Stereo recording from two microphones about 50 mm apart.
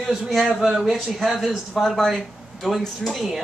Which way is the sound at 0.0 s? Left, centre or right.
Centre.